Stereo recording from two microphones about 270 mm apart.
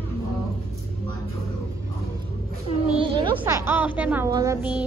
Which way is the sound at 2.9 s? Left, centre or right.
Centre.